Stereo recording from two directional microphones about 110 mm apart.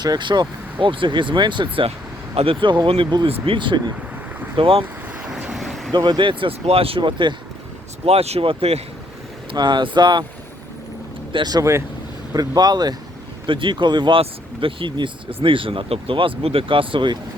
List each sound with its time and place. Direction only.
0.0 s speech: 40° right (ahead or behind)
3.4 s speech: 50° right (ahead or behind)
5.3 s vehicle: 5° right (ahead or behind)
5.9 s speech: 40° right (ahead or behind)
8.0 s speech: 70° right (ahead or behind)
9.5 s speech: 40° right (ahead or behind)
11.3 s speech: 45° right (ahead or behind)